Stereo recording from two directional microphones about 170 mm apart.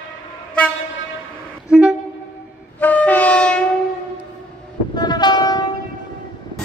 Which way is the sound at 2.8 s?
10° left (ahead or behind).